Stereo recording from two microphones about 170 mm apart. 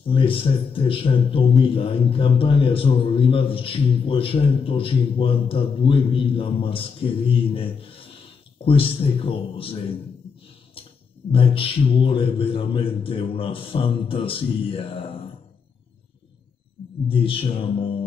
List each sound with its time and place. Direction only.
0.0 s a man's voice: 30° left (ahead or behind)
11.3 s a man's voice: 30° left (ahead or behind)
17.1 s a man's voice: 30° left (ahead or behind)